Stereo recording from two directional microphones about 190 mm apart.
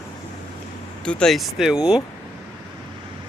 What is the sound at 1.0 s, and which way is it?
Speech, 5° left (ahead or behind).